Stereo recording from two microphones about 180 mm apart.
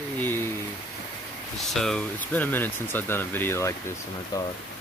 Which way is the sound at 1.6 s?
Centre (ahead or behind).